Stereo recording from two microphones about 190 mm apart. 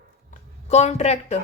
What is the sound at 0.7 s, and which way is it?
Speech, 35° left (ahead or behind).